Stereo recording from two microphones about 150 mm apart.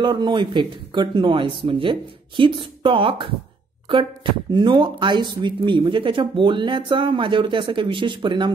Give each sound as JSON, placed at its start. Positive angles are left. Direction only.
{"t": 0.0, "sound": "speech", "side_deg": -30}